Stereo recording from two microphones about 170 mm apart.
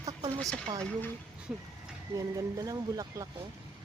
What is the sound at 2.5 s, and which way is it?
Speech, 20° right (ahead or behind).